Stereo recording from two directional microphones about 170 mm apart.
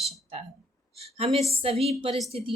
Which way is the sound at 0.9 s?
35° right (ahead or behind).